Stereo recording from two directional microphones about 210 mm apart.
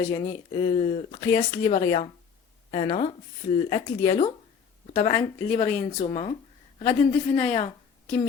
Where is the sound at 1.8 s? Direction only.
25° left (ahead or behind).